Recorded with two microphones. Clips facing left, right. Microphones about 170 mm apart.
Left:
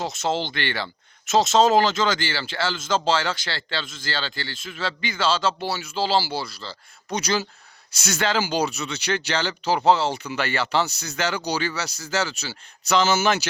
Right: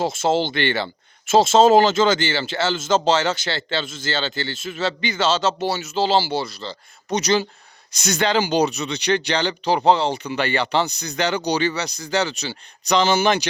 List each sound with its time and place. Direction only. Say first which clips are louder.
0.1 s speech: right 5 dB; 5° right (ahead or behind)
0.5 s speech: right 6 dB; 25° right (ahead or behind)
5.5 s speech: right 5 dB; centre (ahead or behind)
5.9 s speech: right 3 dB; 20° right (ahead or behind)
8.2 s speech: right 4 dB; 20° right (ahead or behind)
13.0 s speech: right 2 dB; 5° left (ahead or behind)